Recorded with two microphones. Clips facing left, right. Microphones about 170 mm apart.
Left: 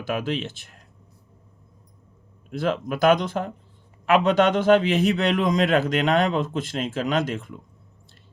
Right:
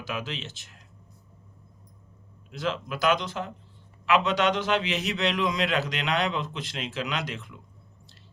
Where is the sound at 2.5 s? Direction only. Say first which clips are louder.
Left 6 dB; 50° left (ahead or behind).